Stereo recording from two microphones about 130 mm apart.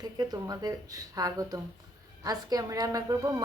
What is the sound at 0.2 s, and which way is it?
A woman's voice, 30° right (ahead or behind).